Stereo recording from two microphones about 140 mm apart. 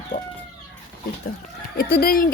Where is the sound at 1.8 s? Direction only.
90° left.